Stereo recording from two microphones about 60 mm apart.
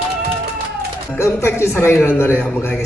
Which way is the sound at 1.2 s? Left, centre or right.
Left.